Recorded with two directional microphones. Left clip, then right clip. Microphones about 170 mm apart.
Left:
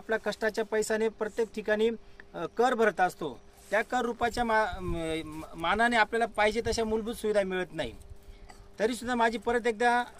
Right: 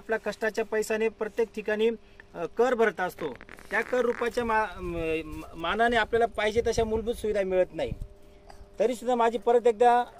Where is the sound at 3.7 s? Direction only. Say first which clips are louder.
Right 2 dB; 40° left (ahead or behind).